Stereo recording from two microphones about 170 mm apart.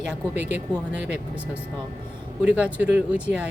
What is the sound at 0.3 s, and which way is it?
Speech, 45° left (ahead or behind).